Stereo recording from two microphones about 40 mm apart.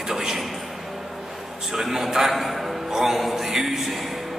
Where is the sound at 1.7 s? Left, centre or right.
Centre.